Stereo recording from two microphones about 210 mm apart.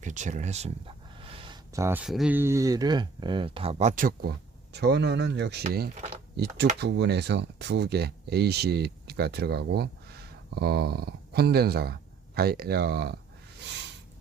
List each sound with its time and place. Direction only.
0.0 s speech: 35° right (ahead or behind)
4.7 s speech: 55° right (ahead or behind)
5.6 s speech: 40° right (ahead or behind)